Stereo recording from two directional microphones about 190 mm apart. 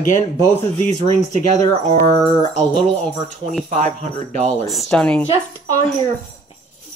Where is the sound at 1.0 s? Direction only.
35° right (ahead or behind).